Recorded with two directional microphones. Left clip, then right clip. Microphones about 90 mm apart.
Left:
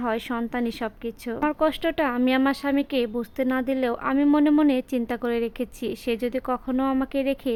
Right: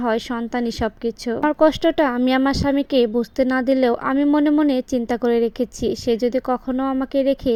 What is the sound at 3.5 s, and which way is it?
Speech, 40° right (ahead or behind).